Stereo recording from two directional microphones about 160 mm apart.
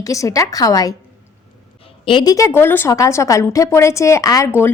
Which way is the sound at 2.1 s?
25° left (ahead or behind).